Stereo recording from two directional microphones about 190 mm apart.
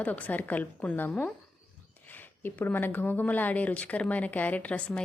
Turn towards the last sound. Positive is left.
turn(degrees=5)  # may be behind; listen again after turning